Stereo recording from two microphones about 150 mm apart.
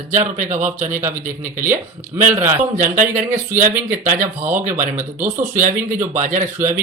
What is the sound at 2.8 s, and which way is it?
Speech, 60° right (ahead or behind).